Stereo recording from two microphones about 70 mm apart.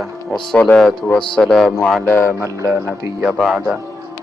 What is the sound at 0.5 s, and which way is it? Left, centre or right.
A man's voice, centre.